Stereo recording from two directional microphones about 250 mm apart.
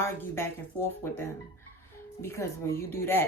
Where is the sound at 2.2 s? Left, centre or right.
Centre.